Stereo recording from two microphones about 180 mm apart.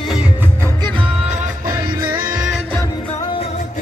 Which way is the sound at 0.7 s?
25° right (ahead or behind).